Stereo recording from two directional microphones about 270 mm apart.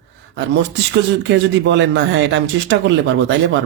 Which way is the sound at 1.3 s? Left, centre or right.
Right.